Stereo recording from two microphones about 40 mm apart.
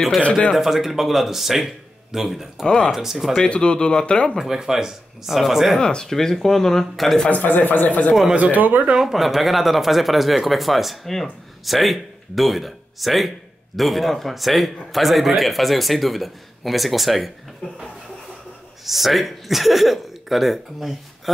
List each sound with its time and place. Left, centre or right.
0.6 s a man's voice: centre
2.6 s speech: centre
2.9 s speech: centre
3.3 s speech: left
4.5 s speech: centre
5.8 s speech: centre
6.0 s speech: centre
7.2 s speech: left
8.1 s speech: centre
8.4 s speech: right
9.0 s a man's voice: centre
18.9 s a man's voice: centre